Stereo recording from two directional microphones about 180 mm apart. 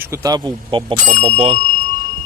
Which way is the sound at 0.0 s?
15° right (ahead or behind).